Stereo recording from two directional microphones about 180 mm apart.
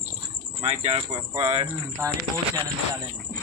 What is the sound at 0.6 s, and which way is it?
Speech, 35° right (ahead or behind).